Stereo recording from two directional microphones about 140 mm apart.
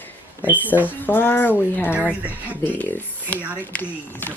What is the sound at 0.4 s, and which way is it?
Speech, 10° right (ahead or behind).